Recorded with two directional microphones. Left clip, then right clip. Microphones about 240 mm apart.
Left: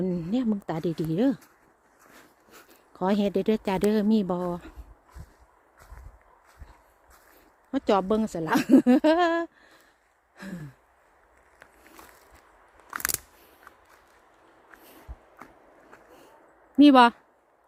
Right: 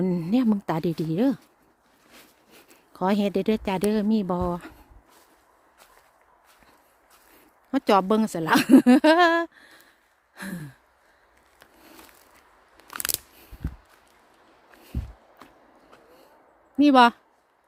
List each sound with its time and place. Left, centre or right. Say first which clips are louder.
0.0 s a woman's voice: right 4 dB; centre
2.5 s speech: left 2 dB; centre
4.4 s a woman's voice: right 3 dB; centre
7.7 s a woman's voice: right 3 dB; centre
10.3 s a sound: right 5 dB; centre
12.9 s a sound: left 1 dB; centre
16.9 s speech: right 2 dB; centre